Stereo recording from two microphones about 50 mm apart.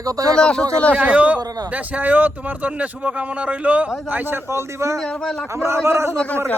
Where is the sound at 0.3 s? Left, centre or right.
Centre.